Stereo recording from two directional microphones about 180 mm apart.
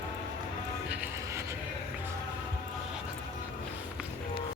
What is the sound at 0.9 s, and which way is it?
Music, 10° right (ahead or behind).